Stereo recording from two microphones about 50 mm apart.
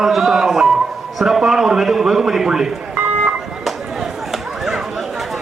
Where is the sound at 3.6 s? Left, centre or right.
Centre.